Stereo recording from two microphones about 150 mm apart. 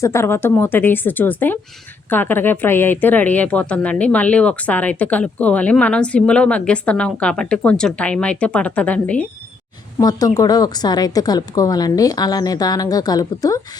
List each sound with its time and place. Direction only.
0.0 s a woman's voice: 20° left (ahead or behind)
10.0 s speech: 25° left (ahead or behind)